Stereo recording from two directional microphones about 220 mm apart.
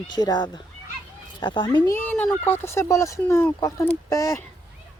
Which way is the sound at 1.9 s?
5° left (ahead or behind).